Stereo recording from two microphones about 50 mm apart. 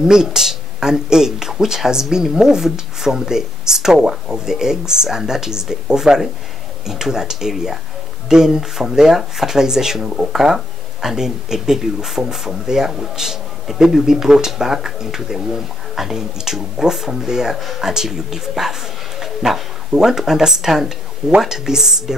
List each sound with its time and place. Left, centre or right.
0.0 s speech: centre
10.0 s speech: right
10.3 s speech: centre